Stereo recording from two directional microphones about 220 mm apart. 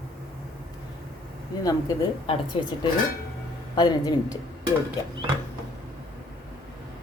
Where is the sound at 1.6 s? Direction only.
20° left (ahead or behind).